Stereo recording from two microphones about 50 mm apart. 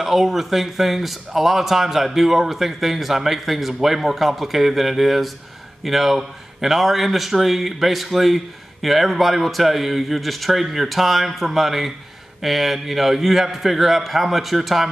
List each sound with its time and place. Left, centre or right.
0.0 s speech: centre